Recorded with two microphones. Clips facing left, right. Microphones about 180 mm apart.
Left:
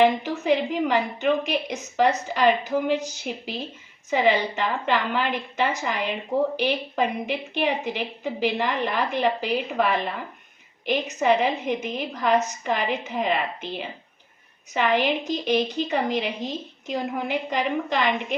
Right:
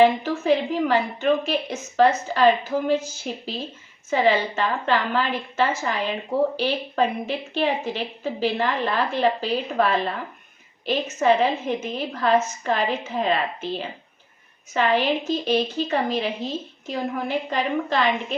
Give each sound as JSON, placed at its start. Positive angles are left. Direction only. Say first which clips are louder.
{"t": 0.0, "sound": "a woman's voice", "louder": "right 2 dB", "side_deg": 15}